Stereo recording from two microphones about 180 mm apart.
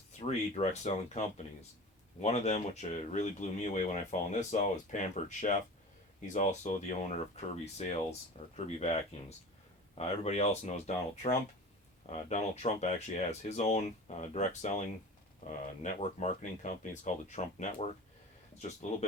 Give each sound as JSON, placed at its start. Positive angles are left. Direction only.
{"t": 0.3, "sound": "speech", "side_deg": 40}
{"t": 2.2, "sound": "speech", "side_deg": 40}